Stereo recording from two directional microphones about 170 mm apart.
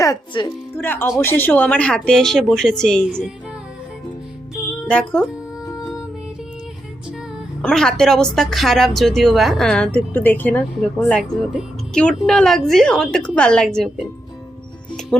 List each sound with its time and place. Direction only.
0.0 s speech: 20° left (ahead or behind); by 3.3 s 5° left (ahead or behind)
4.9 s speech: 5° left (ahead or behind)
7.6 s speech: 5° left (ahead or behind)